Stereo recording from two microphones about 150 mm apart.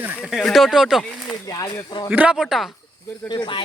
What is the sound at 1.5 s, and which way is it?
Speech, 25° left (ahead or behind).